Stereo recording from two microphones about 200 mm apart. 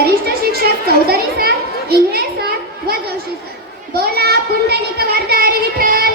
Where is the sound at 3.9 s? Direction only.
55° right (ahead or behind).